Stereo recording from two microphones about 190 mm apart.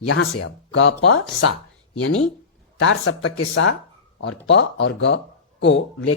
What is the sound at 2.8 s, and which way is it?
Speech, 90° left.